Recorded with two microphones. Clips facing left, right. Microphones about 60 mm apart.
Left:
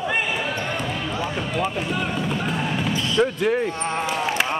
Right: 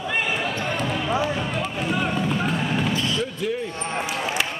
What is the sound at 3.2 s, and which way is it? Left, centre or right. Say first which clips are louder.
Basketball bounce: left 6 dB; left.